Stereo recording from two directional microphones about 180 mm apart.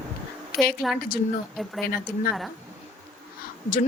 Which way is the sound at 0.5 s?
60° left (ahead or behind).